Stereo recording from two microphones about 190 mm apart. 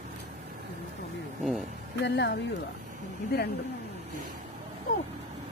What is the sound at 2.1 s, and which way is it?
Speech, 65° left (ahead or behind).